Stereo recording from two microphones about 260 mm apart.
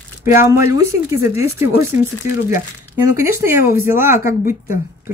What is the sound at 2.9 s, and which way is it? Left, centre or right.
Speech, centre.